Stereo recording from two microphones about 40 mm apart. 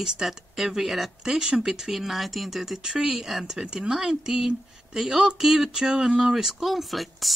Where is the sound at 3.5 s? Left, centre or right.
Centre.